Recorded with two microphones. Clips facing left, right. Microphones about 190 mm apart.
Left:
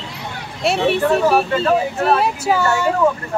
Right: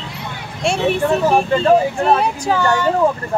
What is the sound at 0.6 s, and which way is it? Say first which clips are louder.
Speech: left 1 dB; centre (ahead or behind).